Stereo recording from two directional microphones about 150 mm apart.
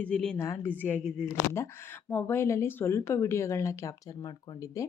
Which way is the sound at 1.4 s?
15° left (ahead or behind).